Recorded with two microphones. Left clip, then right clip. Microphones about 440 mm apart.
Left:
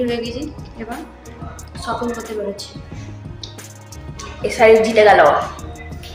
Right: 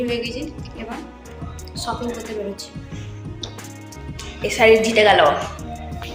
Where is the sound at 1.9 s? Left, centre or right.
Right.